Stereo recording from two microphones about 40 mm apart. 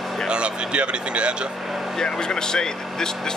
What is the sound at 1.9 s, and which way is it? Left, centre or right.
Speech, centre.